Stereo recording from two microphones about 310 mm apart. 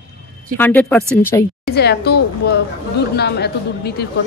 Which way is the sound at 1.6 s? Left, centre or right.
Left.